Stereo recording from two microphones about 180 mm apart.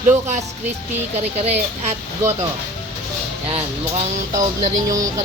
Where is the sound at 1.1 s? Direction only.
35° right (ahead or behind).